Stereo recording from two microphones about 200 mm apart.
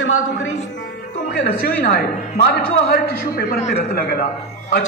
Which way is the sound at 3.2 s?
50° left (ahead or behind).